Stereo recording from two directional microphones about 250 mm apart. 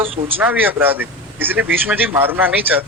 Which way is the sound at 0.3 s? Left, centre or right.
Centre.